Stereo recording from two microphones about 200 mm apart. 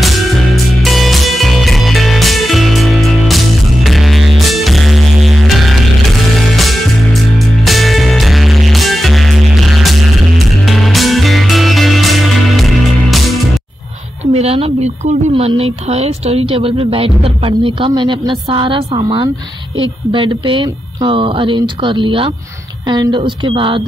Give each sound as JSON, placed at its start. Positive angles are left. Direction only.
{"t": 0.8, "sound": "music", "side_deg": 0}
{"t": 14.3, "sound": "speech", "side_deg": -30}